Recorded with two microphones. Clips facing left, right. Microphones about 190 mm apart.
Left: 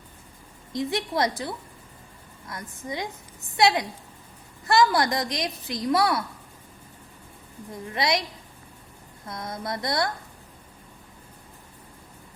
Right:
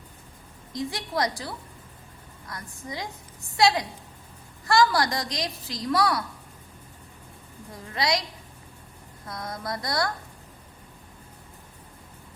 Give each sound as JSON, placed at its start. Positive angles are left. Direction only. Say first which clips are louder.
{"t": 0.7, "sound": "a woman's voice", "louder": "left 3 dB", "side_deg": 25}
{"t": 7.9, "sound": "a woman's voice", "louder": "left 1 dB", "side_deg": 25}
{"t": 9.2, "sound": "a woman's voice", "louder": "left 1 dB", "side_deg": 25}